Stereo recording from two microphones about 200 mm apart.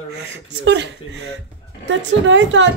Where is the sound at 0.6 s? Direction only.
60° right (ahead or behind).